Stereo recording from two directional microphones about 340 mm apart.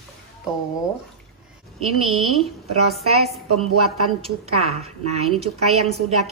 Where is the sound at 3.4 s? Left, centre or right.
Right.